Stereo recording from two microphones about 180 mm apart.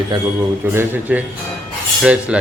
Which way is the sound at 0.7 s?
10° right (ahead or behind).